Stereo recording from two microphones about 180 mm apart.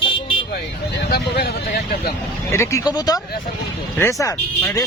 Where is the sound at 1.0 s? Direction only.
60° left (ahead or behind).